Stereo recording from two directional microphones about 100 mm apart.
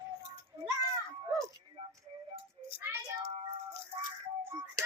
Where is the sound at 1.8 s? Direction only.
85° right.